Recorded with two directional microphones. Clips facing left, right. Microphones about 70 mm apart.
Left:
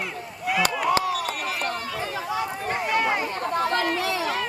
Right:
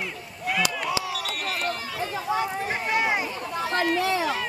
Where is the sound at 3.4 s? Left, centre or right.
Left.